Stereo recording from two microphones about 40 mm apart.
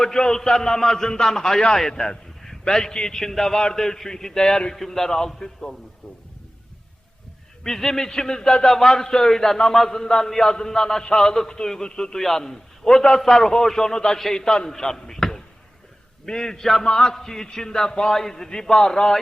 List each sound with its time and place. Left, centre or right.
0.0 s a man's voice: centre
7.6 s a man's voice: centre